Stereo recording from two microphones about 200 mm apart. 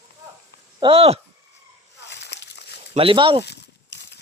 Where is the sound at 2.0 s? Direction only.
60° left (ahead or behind).